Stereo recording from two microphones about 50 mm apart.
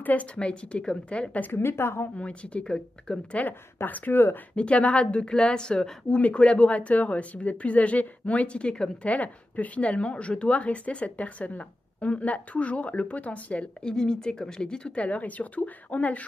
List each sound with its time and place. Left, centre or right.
0.0 s speech: left
1.4 s a woman's voice: left
2.1 s speech: left
3.8 s speech: left
4.6 s speech: left
9.0 s speech: left
13.8 s speech: centre